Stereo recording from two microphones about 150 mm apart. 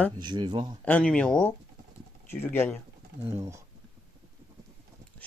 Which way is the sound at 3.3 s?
20° right (ahead or behind).